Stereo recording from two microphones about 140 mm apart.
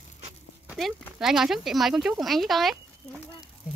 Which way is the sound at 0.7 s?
Centre (ahead or behind).